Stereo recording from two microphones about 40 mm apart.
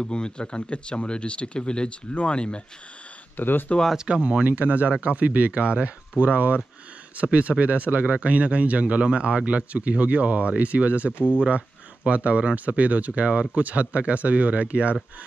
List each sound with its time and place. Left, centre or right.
0.0 s speech: left
3.3 s speech: left
3.9 s speech: centre
4.2 s speech: right
4.5 s speech: right